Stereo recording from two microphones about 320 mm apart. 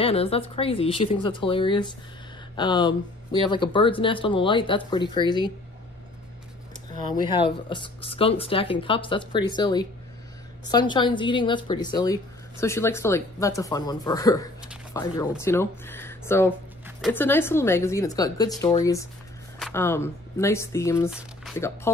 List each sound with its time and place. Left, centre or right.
0.0 s a woman's voice: centre
7.2 s a woman's voice: centre